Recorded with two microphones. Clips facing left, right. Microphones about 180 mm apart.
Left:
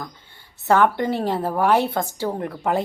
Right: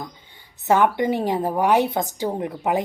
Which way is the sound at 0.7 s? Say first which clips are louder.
Even; 15° right (ahead or behind).